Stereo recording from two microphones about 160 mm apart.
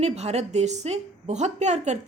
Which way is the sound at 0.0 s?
40° right (ahead or behind).